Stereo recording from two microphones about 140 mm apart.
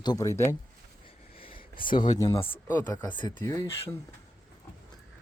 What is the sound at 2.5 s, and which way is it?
Speech, 15° left (ahead or behind).